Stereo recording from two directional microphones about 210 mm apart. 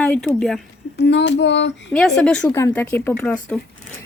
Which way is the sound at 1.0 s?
55° left (ahead or behind).